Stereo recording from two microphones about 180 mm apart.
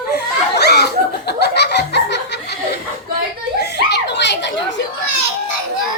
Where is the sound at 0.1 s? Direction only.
65° left (ahead or behind).